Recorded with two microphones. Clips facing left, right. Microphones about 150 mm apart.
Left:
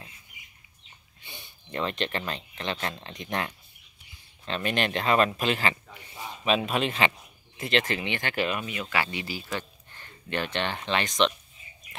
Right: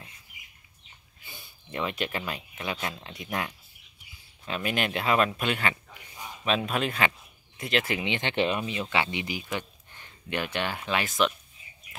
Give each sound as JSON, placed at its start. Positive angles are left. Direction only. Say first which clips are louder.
{"t": 1.2, "sound": "speech", "louder": "left 2 dB", "side_deg": -5}
{"t": 7.8, "sound": "speech", "louder": "right 1 dB", "side_deg": -15}